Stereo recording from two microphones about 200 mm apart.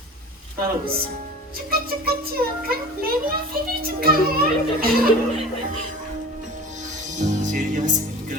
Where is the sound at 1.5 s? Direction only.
50° right (ahead or behind).